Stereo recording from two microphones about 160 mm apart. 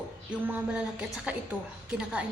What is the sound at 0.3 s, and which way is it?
A woman's voice, 10° right (ahead or behind).